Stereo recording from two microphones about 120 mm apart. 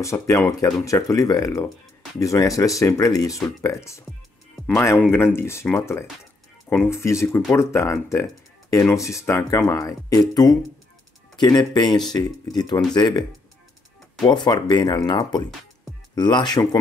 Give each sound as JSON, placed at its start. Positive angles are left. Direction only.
{"t": 0.0, "sound": "speech", "side_deg": 25}
{"t": 5.1, "sound": "speech", "side_deg": 20}
{"t": 14.2, "sound": "speech", "side_deg": 35}